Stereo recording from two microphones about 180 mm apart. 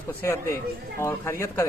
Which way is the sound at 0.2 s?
15° left (ahead or behind).